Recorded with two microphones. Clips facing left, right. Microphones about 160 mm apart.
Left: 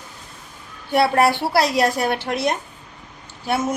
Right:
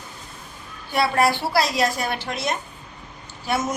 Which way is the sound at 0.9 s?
60° left (ahead or behind).